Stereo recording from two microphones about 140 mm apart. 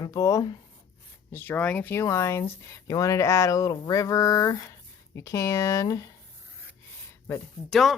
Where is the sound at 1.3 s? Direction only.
15° left (ahead or behind).